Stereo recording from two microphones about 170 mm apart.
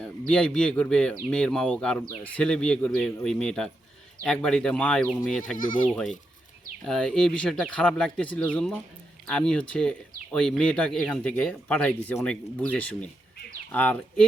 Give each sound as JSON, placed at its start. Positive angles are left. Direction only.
{"t": 0.0, "sound": "speech", "side_deg": 5}
{"t": 5.5, "sound": "speech", "side_deg": 50}
{"t": 5.9, "sound": "speech", "side_deg": 5}